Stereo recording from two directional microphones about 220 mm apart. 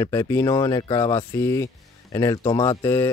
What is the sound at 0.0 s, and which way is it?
Speech, 15° left (ahead or behind).